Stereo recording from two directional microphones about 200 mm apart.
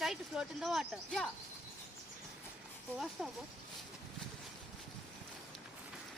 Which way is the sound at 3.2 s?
5° right (ahead or behind).